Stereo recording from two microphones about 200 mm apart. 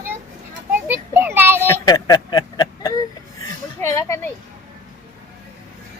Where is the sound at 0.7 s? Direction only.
10° right (ahead or behind).